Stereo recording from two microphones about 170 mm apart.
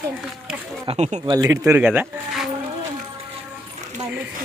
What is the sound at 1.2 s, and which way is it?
Speech, 25° right (ahead or behind).